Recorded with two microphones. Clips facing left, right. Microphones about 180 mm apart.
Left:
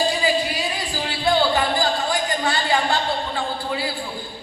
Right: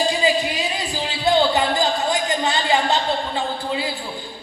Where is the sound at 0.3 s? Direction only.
20° right (ahead or behind).